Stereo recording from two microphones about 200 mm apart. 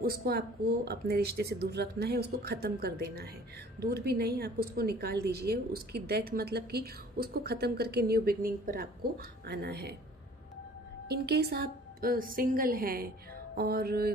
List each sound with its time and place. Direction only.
0.0 s a woman's voice: 50° right (ahead or behind)
11.1 s a woman's voice: 55° right (ahead or behind)